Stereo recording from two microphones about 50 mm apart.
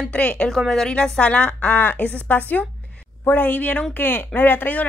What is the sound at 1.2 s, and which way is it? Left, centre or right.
Speech, left.